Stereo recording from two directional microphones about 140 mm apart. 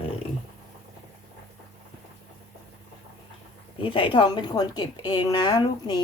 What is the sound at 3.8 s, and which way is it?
A woman's voice, 40° left (ahead or behind).